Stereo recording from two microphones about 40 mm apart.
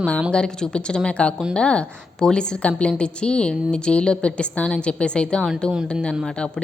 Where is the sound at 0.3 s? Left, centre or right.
Left.